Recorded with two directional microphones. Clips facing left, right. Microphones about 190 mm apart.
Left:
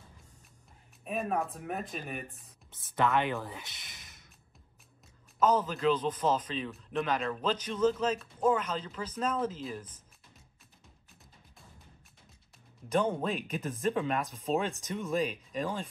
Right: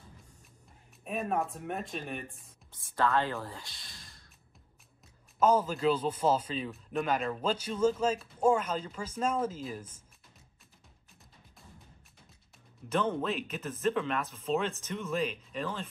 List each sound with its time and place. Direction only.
1.0 s speech: centre (ahead or behind)
2.7 s speech: 25° left (ahead or behind)
5.4 s a man's voice: 10° right (ahead or behind)
12.9 s speech: 15° left (ahead or behind)
13.3 s speech: 45° left (ahead or behind)
13.6 s speech: 15° left (ahead or behind)